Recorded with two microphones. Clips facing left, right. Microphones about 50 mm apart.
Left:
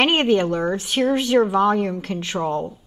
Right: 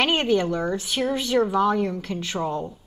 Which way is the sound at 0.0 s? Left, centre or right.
Left.